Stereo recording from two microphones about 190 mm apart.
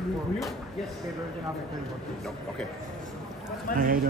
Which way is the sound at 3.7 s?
45° right (ahead or behind).